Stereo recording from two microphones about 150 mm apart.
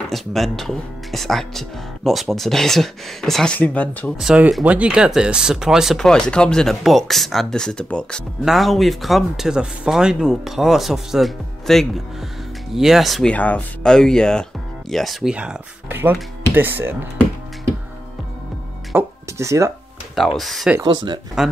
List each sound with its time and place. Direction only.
0.1 s speech: centre (ahead or behind)
4.2 s speech: 5° right (ahead or behind)
18.9 s speech: 20° right (ahead or behind)
20.2 s speech: centre (ahead or behind)
20.8 s speech: 30° right (ahead or behind)